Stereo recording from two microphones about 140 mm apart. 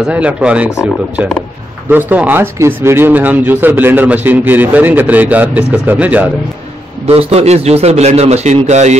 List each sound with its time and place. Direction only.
0.1 s speech: 10° right (ahead or behind)
1.9 s speech: 15° right (ahead or behind)
7.1 s a man's voice: 45° right (ahead or behind)